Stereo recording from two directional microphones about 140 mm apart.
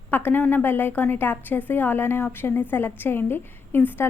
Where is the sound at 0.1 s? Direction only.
15° left (ahead or behind).